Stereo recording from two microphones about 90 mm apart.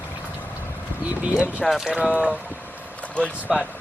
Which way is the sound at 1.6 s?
Centre (ahead or behind).